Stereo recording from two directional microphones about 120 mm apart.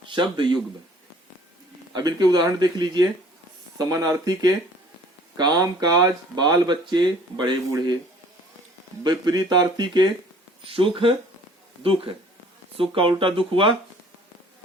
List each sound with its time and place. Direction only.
0.0 s speech: 40° right (ahead or behind)
1.9 s speech: 35° right (ahead or behind)
9.0 s speech: 35° right (ahead or behind)
10.6 s speech: 50° right (ahead or behind)